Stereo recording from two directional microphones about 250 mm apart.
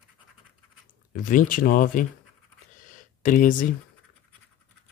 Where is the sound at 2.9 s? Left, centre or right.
Left.